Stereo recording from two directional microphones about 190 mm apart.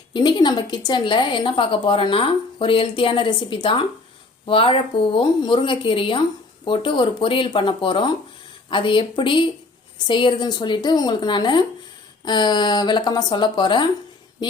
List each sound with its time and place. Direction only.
0.1 s a woman's voice: 25° left (ahead or behind)